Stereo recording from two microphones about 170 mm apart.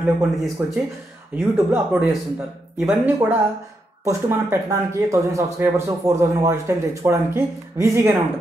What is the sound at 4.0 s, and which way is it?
Speech, 15° right (ahead or behind).